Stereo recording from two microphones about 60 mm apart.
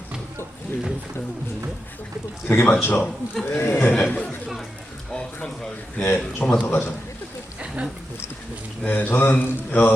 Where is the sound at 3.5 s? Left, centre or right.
Left.